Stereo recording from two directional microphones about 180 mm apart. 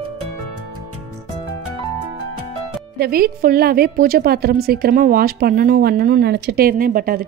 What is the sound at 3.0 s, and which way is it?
A woman's voice, 55° right (ahead or behind).